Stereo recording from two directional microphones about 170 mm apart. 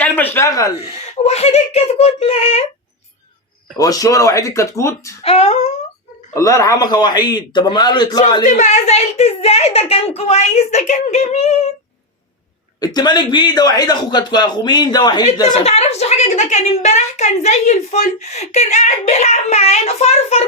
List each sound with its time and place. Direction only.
0.0 s speech: 10° left (ahead or behind)
0.8 s a woman's voice: 40° left (ahead or behind)
3.8 s a man's voice: 20° left (ahead or behind)
5.2 s a woman's voice: 35° left (ahead or behind)
6.3 s a man's voice: 20° left (ahead or behind)
8.4 s a woman's voice: 45° left (ahead or behind)
12.8 s a man's voice: 25° left (ahead or behind)
15.6 s a woman's voice: 40° left (ahead or behind)